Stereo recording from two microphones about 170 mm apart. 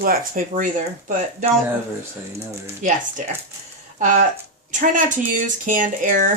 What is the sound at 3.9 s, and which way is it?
Speech, 45° right (ahead or behind).